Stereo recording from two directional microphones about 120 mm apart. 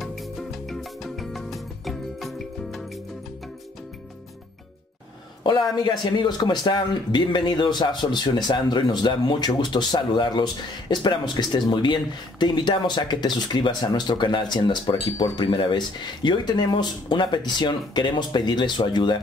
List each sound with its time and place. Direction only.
0.0 s music: centre (ahead or behind)
5.4 s speech: 40° left (ahead or behind)